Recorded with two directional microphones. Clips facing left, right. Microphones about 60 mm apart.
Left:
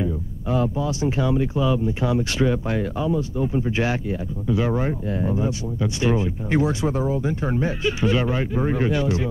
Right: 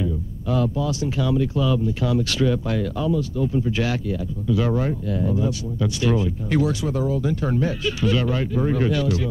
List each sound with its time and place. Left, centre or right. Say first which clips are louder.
0.0 s speech: even; left